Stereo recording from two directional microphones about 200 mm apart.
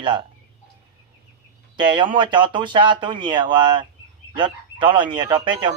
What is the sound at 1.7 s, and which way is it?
Speech, 25° right (ahead or behind).